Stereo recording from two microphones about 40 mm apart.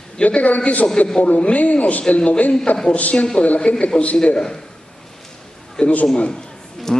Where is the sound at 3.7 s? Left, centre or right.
Left.